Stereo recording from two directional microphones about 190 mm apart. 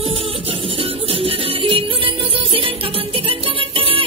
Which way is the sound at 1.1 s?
30° right (ahead or behind).